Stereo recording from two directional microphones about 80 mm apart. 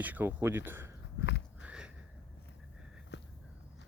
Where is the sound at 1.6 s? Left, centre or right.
Centre.